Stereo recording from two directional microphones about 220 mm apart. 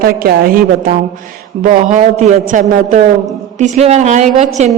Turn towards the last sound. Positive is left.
turn(degrees=-30)  # may be behind; listen again after turning